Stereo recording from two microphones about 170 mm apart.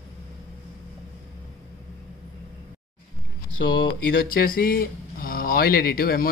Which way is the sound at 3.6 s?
90° left.